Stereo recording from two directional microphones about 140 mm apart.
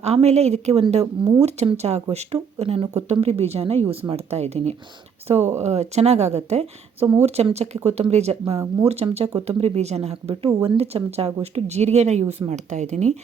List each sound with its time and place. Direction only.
0.0 s speech: 50° right (ahead or behind)
5.4 s speech: 20° right (ahead or behind)
5.6 s speech: 50° right (ahead or behind)